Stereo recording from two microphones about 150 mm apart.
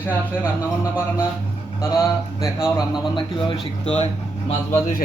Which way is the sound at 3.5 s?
45° left (ahead or behind).